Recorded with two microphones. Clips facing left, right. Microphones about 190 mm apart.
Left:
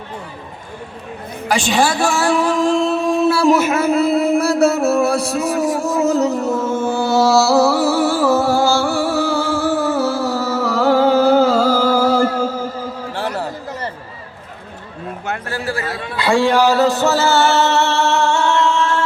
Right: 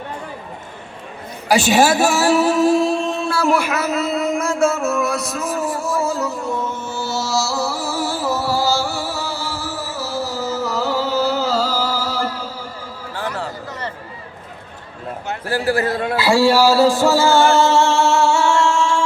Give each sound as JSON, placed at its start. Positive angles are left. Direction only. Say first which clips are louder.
{"t": 1.5, "sound": "a man's voice", "louder": "right 3 dB", "side_deg": -5}
{"t": 2.2, "sound": "music", "louder": "right 1 dB", "side_deg": -5}
{"t": 3.2, "sound": "speech", "louder": "left 5 dB", "side_deg": 15}
{"t": 3.9, "sound": "a sound", "louder": "left 5 dB", "side_deg": 35}
{"t": 5.5, "sound": "a man's voice", "louder": "left 2 dB", "side_deg": 15}
{"t": 6.4, "sound": "music", "louder": "left 6 dB", "side_deg": 45}
{"t": 15.4, "sound": "a man's voice", "louder": "right 8 dB", "side_deg": -35}
{"t": 16.1, "sound": "music", "louder": "even", "side_deg": -5}